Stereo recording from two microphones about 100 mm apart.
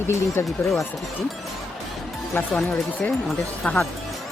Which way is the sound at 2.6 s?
5° left (ahead or behind).